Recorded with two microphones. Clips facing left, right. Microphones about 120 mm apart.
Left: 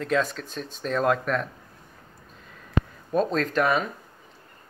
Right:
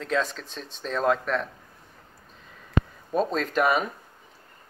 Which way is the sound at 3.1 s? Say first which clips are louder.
Left 1 dB; centre (ahead or behind).